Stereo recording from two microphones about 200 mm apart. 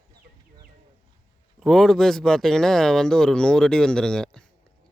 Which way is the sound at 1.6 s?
Centre (ahead or behind).